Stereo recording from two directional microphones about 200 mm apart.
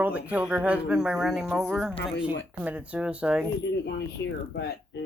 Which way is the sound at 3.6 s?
65° left (ahead or behind).